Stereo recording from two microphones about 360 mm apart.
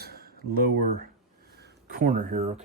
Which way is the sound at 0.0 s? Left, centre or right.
Right.